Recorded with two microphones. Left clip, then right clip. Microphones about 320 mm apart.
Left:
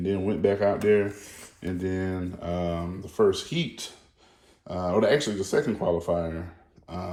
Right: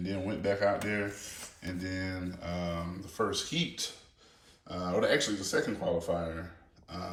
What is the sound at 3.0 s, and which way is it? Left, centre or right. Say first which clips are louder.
Speech: left 10 dB; centre.